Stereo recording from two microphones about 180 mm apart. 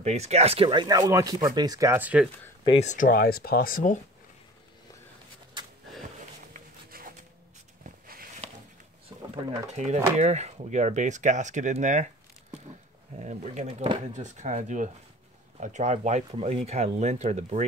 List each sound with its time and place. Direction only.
0.0 s speech: 40° right (ahead or behind); by 2.2 s 10° right (ahead or behind)
2.8 s speech: 45° left (ahead or behind)
5.6 s a sound: 25° right (ahead or behind)
6.5 s a sound: 50° right (ahead or behind)
9.3 s speech: 40° right (ahead or behind)
13.2 s speech: 40° right (ahead or behind)